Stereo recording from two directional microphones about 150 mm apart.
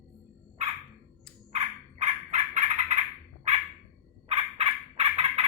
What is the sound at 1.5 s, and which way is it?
Fowl, 45° right (ahead or behind).